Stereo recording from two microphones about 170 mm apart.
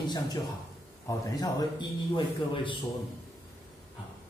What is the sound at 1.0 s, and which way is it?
A man's voice, 25° left (ahead or behind).